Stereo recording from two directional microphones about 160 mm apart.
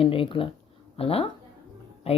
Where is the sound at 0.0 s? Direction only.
35° left (ahead or behind).